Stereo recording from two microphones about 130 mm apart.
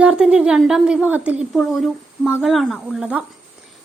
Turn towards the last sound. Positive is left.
turn(degrees=-5)  # may be behind; listen again after turning